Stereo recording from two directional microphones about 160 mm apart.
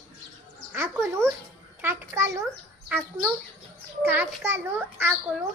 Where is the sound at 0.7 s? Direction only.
15° right (ahead or behind).